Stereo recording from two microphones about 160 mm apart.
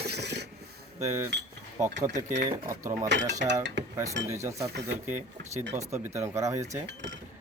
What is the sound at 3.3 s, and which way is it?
Speech, 50° right (ahead or behind).